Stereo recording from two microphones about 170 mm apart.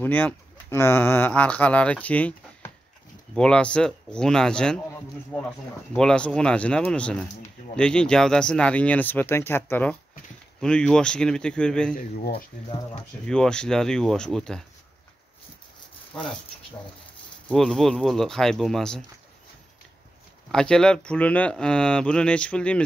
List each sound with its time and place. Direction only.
0.0 s speech: 10° left (ahead or behind)
5.9 s speech: 5° left (ahead or behind)
11.9 s speech: 55° left (ahead or behind)
13.3 s speech: 5° left (ahead or behind)
16.1 s speech: 5° left (ahead or behind)
17.5 s speech: 5° left (ahead or behind)
20.5 s speech: 5° left (ahead or behind)